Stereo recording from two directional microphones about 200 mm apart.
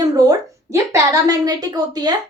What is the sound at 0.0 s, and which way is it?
A woman's voice, 20° right (ahead or behind).